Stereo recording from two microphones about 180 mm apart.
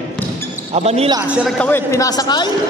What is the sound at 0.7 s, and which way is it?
Speech, 35° right (ahead or behind).